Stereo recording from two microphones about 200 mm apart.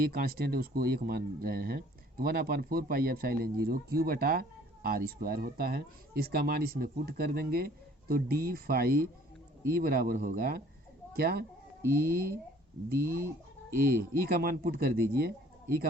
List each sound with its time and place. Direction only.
0.0 s speech: 50° right (ahead or behind)